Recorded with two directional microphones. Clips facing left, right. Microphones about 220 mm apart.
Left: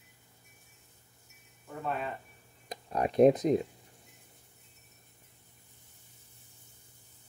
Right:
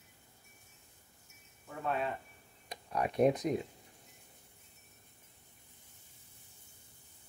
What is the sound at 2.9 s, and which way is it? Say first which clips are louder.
Speech: left 6 dB; 30° left (ahead or behind).